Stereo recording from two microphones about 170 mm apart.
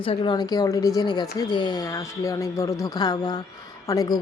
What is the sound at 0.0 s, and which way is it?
Speech, 30° left (ahead or behind).